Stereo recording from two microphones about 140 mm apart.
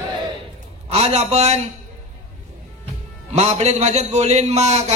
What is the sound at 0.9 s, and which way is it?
Speech, 50° right (ahead or behind).